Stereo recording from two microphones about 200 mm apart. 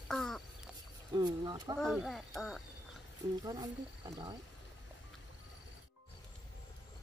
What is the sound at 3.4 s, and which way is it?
Speech, 20° right (ahead or behind).